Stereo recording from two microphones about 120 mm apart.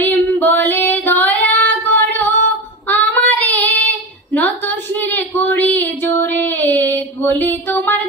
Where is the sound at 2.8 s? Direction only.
15° left (ahead or behind).